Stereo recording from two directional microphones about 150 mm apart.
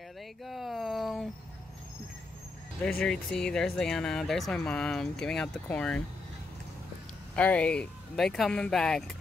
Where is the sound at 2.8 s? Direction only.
5° left (ahead or behind).